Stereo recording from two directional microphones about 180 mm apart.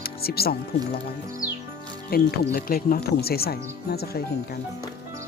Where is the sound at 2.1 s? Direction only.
60° left (ahead or behind).